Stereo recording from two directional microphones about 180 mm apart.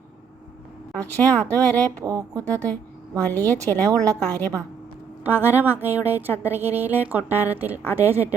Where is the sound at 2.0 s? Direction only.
20° right (ahead or behind).